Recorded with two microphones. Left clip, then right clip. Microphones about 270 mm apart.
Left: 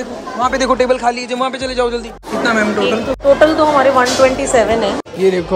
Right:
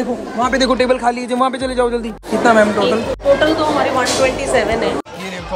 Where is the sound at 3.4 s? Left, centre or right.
Left.